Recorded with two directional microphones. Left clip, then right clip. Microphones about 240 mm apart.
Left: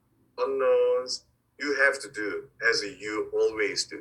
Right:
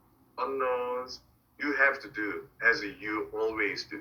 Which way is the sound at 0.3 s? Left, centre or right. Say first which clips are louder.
Left 7 dB; left.